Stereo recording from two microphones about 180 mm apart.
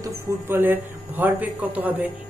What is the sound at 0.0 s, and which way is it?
Speech, 10° right (ahead or behind).